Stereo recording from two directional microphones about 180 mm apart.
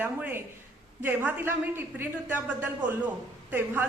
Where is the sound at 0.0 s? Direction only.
10° right (ahead or behind).